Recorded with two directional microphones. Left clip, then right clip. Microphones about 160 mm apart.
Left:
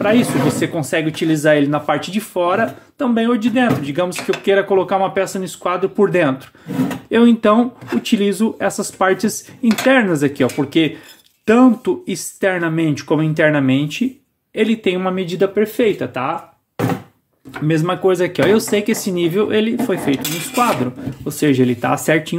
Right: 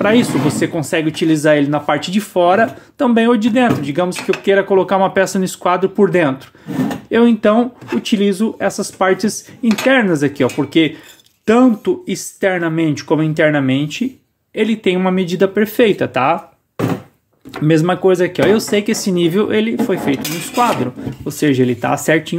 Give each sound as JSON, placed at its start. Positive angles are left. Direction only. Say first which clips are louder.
{"t": 0.0, "sound": "speech", "louder": "right 2 dB", "side_deg": -30}
{"t": 0.5, "sound": "speech", "louder": "right 1 dB", "side_deg": -10}
{"t": 2.0, "sound": "speech", "louder": "right 4 dB", "side_deg": -25}
{"t": 5.9, "sound": "speech", "louder": "right 1 dB", "side_deg": -10}
{"t": 15.6, "sound": "speech", "louder": "right 3 dB", "side_deg": -35}
{"t": 17.5, "sound": "speech", "louder": "right 4 dB", "side_deg": -30}
{"t": 18.0, "sound": "speech", "louder": "left 1 dB", "side_deg": -10}